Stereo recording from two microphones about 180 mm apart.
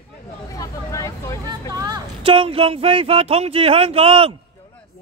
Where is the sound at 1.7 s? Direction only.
20° right (ahead or behind).